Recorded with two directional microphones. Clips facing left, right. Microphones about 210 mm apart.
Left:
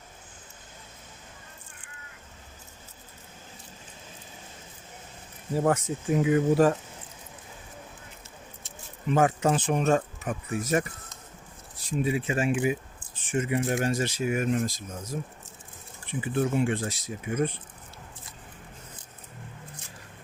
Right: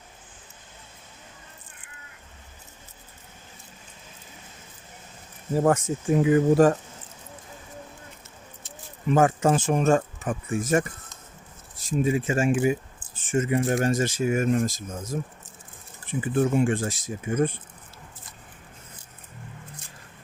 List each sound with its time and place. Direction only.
5.5 s speech: 45° right (ahead or behind)
9.0 s speech: 45° right (ahead or behind)
11.9 s speech: 45° right (ahead or behind)